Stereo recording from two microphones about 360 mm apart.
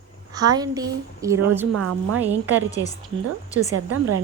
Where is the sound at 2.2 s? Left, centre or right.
Centre.